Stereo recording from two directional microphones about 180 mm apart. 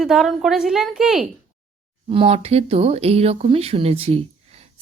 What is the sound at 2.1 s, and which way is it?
Speech, 30° right (ahead or behind).